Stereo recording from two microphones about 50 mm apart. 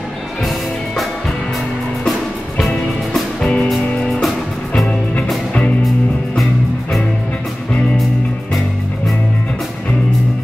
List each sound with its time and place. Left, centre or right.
3.3 s music: centre
3.6 s music: centre